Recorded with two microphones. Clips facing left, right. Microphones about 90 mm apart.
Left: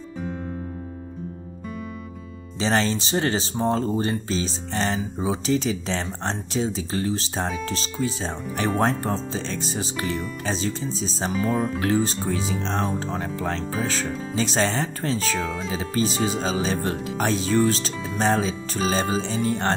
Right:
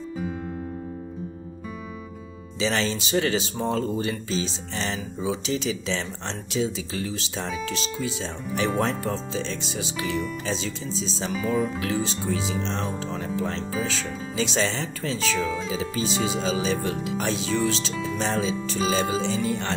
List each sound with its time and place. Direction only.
2.6 s speech: 40° left (ahead or behind)